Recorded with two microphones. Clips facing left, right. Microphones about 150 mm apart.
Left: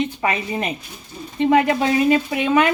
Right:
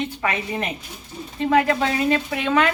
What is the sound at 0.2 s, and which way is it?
Speech, 20° left (ahead or behind).